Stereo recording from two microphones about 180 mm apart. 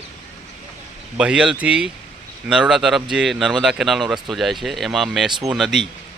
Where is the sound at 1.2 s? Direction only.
5° right (ahead or behind).